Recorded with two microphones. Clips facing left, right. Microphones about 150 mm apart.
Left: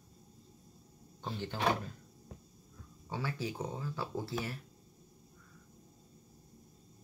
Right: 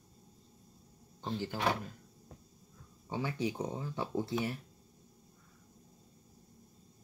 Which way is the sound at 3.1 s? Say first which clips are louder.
Right 3 dB; 20° right (ahead or behind).